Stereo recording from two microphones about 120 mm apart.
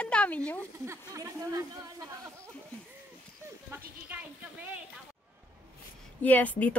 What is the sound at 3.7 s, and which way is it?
Speech, 15° right (ahead or behind).